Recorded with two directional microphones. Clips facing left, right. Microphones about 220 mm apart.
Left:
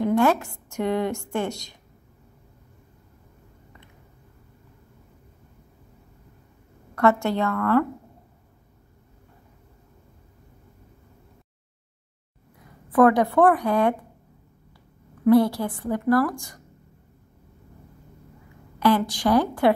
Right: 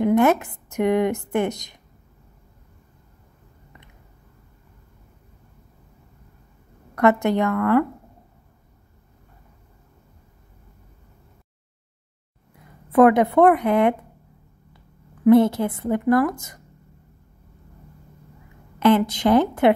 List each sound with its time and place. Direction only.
0.0 s a woman's voice: 20° right (ahead or behind)
7.0 s a woman's voice: 20° right (ahead or behind)
12.9 s a woman's voice: 20° right (ahead or behind)
15.2 s a woman's voice: 20° right (ahead or behind)
18.8 s a woman's voice: 20° right (ahead or behind)